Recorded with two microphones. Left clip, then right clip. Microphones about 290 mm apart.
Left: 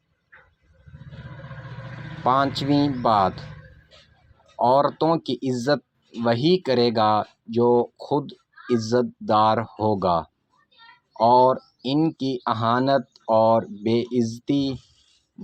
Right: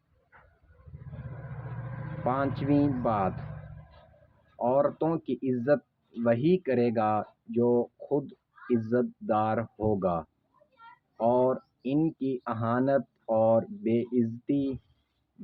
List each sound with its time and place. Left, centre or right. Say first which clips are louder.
2.2 s speech: left 9 dB; centre
4.5 s speech: left 7 dB; centre